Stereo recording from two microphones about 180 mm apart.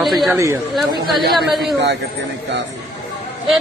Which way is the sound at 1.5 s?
Centre (ahead or behind).